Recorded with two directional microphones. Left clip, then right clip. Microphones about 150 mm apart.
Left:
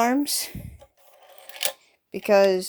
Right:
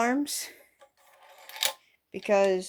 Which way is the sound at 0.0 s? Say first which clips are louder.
Left 5 dB; 50° left (ahead or behind).